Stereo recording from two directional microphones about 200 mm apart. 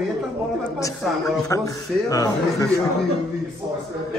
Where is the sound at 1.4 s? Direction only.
15° left (ahead or behind).